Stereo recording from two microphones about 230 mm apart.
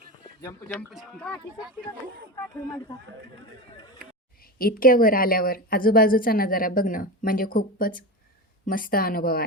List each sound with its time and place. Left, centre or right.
0.7 s speech: centre
4.5 s a woman's voice: left